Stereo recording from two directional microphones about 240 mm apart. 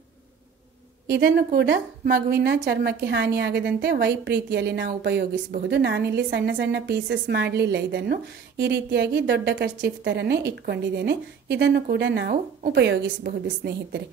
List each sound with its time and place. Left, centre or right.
1.0 s a woman's voice: right